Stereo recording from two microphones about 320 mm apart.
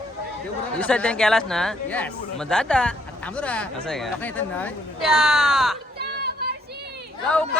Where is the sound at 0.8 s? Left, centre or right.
Centre.